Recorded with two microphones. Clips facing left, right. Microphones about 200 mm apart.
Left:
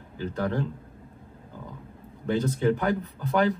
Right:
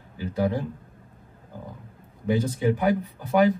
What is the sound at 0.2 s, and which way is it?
Speech, 10° right (ahead or behind).